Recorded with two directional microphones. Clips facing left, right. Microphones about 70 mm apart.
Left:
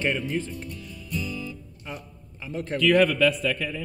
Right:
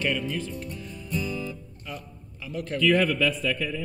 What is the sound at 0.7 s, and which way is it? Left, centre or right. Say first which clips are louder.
Music: right 2 dB; right.